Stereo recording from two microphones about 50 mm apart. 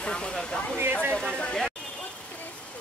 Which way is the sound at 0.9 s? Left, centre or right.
Right.